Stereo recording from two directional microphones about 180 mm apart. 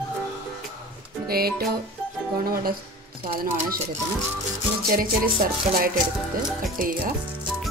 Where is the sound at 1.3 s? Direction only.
60° right (ahead or behind).